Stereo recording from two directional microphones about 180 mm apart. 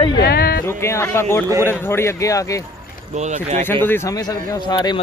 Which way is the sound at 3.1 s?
40° right (ahead or behind).